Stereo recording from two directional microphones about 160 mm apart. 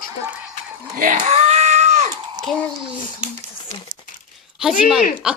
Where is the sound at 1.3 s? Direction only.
40° right (ahead or behind).